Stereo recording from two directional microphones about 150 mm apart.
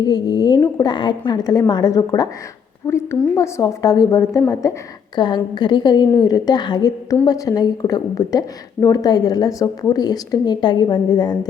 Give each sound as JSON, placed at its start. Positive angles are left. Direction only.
{"t": 0.0, "sound": "a woman's voice", "side_deg": 30}